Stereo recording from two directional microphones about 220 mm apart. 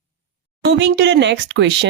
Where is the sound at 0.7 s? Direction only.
50° right (ahead or behind).